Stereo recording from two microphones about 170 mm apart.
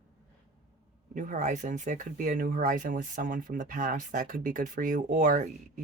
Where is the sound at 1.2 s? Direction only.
50° right (ahead or behind).